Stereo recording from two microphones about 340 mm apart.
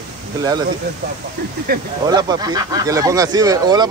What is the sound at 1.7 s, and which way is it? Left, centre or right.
Speech, right.